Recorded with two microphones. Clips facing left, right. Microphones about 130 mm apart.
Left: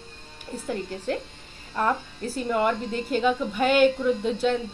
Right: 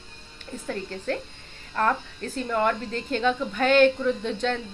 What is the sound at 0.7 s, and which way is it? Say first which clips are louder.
A woman's voice: left 1 dB; 15° left (ahead or behind).